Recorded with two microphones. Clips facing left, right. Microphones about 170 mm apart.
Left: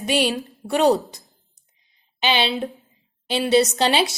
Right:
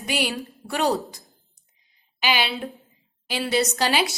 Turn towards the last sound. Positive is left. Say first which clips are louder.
# left 5 dB
turn(degrees=25)  # may be behind; listen again after turning